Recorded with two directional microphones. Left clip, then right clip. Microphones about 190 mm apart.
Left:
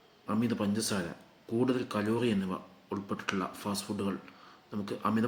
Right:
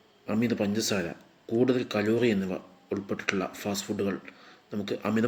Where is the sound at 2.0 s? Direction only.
50° left (ahead or behind).